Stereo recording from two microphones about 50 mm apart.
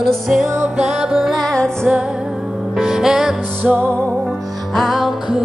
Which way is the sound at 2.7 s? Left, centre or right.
Centre.